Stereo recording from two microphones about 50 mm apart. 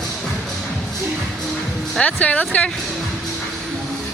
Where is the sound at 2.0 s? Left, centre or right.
Left.